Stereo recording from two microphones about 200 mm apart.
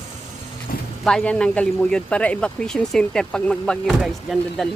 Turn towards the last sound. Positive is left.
turn(degrees=0)  # may be behind; listen again after turning